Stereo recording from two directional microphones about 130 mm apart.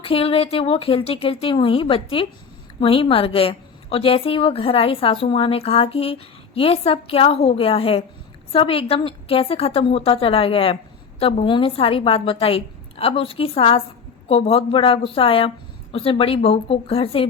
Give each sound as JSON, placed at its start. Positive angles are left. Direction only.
{"t": 0.0, "sound": "a woman's voice", "side_deg": 45}